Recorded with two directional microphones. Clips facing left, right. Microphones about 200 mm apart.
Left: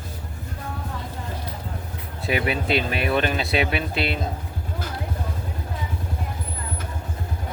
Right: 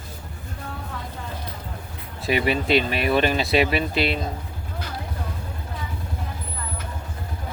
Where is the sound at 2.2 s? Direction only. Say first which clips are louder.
Right 2 dB; centre (ahead or behind).